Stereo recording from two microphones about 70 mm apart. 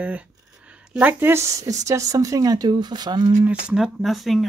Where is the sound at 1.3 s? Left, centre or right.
Right.